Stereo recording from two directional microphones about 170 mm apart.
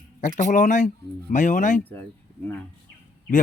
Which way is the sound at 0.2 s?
45° left (ahead or behind).